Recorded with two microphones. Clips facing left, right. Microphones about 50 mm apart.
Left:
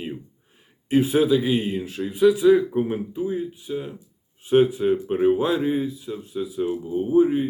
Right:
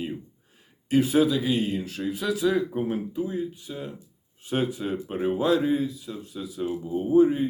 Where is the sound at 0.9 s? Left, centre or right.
Centre.